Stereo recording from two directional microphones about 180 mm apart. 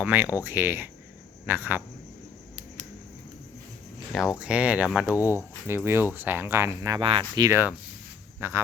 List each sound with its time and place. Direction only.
0.0 s speech: 10° right (ahead or behind)
4.4 s speech: 5° right (ahead or behind)
7.0 s speech: 30° right (ahead or behind); by 8.6 s 15° right (ahead or behind)